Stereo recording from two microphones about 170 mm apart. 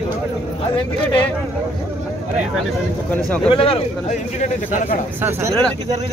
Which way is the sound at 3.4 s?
35° left (ahead or behind).